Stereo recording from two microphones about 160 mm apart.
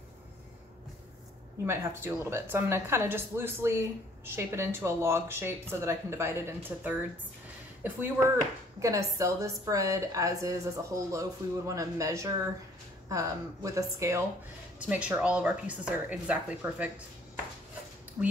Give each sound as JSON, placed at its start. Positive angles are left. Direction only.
{"t": 1.7, "sound": "speech", "side_deg": -15}
{"t": 8.7, "sound": "a woman's voice", "side_deg": -20}
{"t": 14.8, "sound": "speech", "side_deg": -10}
{"t": 18.2, "sound": "speech", "side_deg": -15}